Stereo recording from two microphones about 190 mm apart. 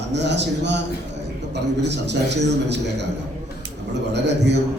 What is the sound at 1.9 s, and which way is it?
A man's voice, 65° right (ahead or behind).